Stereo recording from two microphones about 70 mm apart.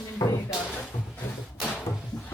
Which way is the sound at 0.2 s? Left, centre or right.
Left.